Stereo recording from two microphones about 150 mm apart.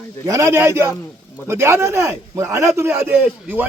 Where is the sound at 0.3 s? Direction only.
20° right (ahead or behind).